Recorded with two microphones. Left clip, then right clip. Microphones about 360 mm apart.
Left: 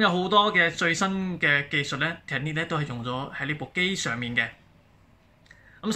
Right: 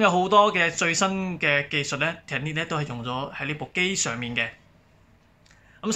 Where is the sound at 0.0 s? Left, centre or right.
Centre.